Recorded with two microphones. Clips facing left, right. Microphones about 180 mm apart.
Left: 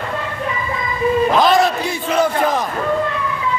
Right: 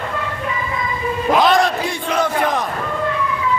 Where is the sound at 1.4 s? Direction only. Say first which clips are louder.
Left 1 dB; centre (ahead or behind).